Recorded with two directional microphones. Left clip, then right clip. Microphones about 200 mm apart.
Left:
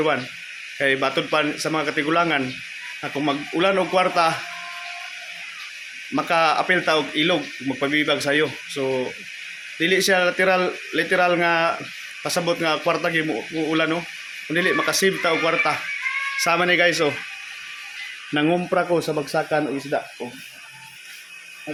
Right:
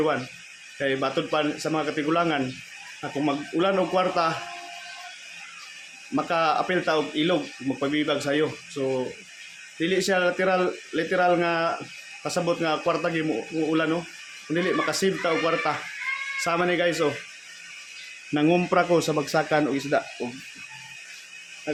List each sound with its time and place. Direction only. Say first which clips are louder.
0.8 s speech: left 5 dB; centre (ahead or behind)
6.1 s speech: left 4 dB; centre (ahead or behind)
18.3 s a man's voice: left 1 dB; 15° right (ahead or behind)